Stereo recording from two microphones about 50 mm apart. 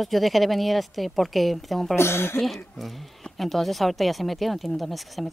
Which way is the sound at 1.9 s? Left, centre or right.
Left.